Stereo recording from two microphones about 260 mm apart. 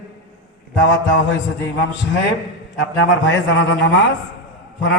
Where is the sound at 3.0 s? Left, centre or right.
Left.